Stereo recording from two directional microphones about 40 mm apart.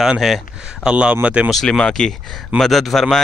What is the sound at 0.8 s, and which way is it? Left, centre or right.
Speech, right.